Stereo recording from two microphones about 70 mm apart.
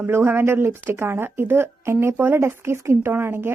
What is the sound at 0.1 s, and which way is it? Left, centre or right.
A woman's voice, right.